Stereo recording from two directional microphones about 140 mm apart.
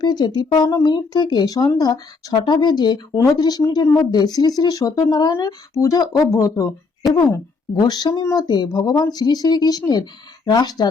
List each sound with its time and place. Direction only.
0.0 s speech: 30° left (ahead or behind)